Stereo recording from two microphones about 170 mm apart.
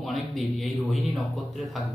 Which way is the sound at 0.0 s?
Centre (ahead or behind).